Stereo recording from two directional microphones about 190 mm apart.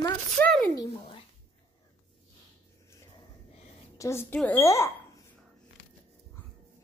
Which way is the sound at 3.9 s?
15° left (ahead or behind).